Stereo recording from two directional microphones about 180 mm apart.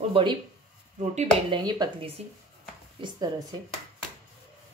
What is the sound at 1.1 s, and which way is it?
Speech, 40° right (ahead or behind).